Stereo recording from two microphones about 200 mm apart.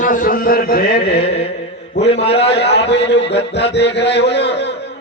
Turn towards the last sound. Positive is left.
turn(degrees=60)  # may be behind; listen again after turning